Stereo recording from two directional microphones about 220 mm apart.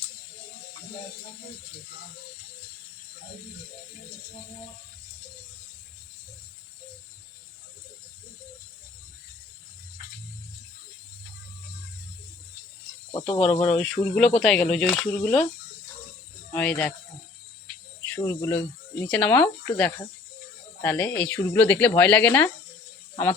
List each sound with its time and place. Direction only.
13.1 s speech: 25° left (ahead or behind)
13.7 s speech: centre (ahead or behind)
16.5 s speech: 5° left (ahead or behind)
18.0 s speech: 10° left (ahead or behind)